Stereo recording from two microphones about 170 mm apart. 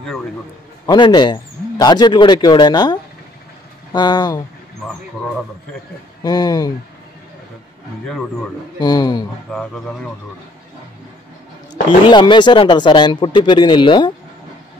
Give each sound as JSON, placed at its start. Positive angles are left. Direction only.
{"t": 0.8, "sound": "speech", "side_deg": 25}
{"t": 6.2, "sound": "speech", "side_deg": 25}
{"t": 8.7, "sound": "speech", "side_deg": 25}
{"t": 9.5, "sound": "speech", "side_deg": 5}
{"t": 12.1, "sound": "speech", "side_deg": 25}